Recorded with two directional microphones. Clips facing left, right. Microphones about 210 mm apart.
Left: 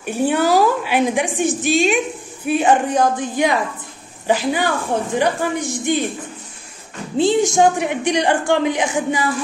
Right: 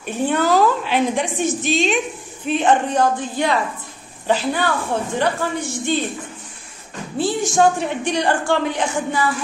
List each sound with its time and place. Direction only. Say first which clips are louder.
0.0 s a woman's voice: left 2 dB; 10° left (ahead or behind)
7.2 s a woman's voice: left 3 dB; 20° left (ahead or behind)